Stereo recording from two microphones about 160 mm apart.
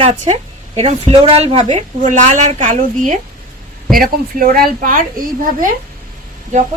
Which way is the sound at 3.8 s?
65° right (ahead or behind).